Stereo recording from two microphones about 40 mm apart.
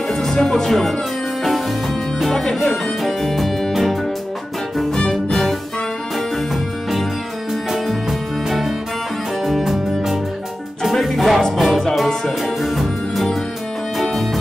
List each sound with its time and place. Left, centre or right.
0.1 s music: centre
0.7 s speech: centre
2.3 s music: centre
4.9 s music: centre
5.3 s music: centre